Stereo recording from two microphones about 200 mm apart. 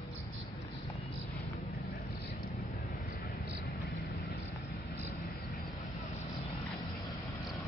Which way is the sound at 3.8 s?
Centre (ahead or behind).